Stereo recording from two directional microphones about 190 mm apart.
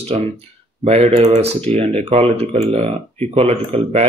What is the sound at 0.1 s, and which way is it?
Speech, 35° right (ahead or behind).